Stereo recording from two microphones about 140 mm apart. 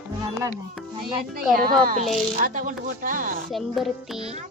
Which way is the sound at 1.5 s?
90° right.